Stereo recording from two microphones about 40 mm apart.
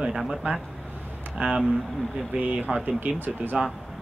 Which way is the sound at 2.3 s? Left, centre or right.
Right.